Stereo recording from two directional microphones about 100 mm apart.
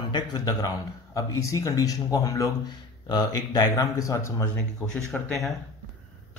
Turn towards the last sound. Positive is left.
turn(degrees=0)  # may be behind; listen again after turning